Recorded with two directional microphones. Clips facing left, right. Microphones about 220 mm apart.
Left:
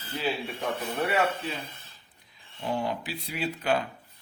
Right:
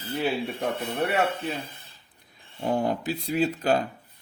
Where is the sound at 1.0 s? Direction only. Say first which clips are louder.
Right 2 dB; 60° right (ahead or behind).